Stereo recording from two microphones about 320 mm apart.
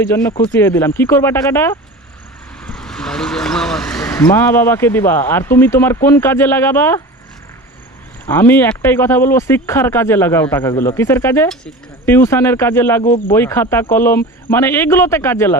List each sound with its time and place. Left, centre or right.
0.1 s speech: centre
8.3 s speech: centre
13.1 s speech: left
13.3 s speech: centre